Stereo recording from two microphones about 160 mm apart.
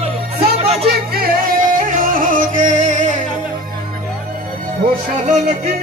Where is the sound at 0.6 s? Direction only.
40° right (ahead or behind).